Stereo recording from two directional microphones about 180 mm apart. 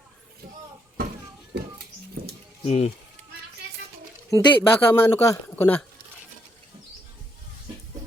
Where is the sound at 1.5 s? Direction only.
70° right (ahead or behind).